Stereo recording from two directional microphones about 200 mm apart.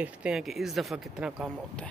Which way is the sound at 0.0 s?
5° right (ahead or behind).